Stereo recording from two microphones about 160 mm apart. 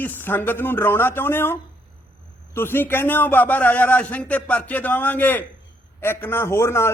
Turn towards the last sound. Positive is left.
turn(degrees=15)  # may be behind; listen again after turning